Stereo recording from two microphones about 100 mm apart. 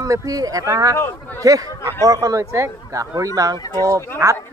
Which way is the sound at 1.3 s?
35° right (ahead or behind).